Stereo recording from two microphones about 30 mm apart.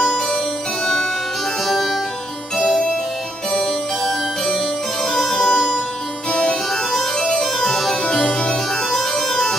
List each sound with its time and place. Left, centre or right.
1.7 s harpsichord: centre
3.5 s music: centre
6.3 s harpsichord: left
7.2 s music: centre
8.3 s organ: left
9.1 s music: centre